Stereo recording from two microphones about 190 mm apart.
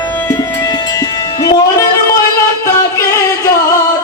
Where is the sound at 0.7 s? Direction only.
20° left (ahead or behind).